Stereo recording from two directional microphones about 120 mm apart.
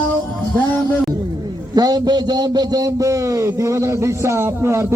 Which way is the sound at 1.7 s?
35° right (ahead or behind).